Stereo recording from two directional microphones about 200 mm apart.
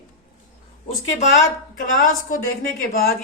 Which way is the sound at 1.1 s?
40° left (ahead or behind).